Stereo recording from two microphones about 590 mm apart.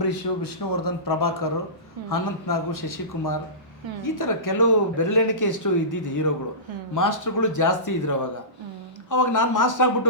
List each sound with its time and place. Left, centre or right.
0.0 s speech: left